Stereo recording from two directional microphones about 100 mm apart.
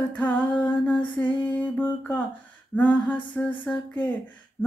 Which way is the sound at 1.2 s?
15° left (ahead or behind).